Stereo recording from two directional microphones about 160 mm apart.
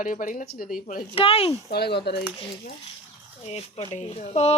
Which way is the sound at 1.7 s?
90° left.